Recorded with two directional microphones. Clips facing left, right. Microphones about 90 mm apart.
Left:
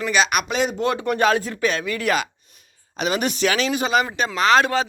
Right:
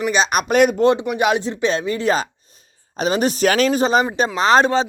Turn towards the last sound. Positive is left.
turn(degrees=-30)  # may be behind; listen again after turning